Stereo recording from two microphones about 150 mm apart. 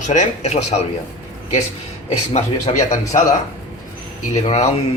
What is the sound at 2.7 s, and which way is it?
Speech, 55° left (ahead or behind).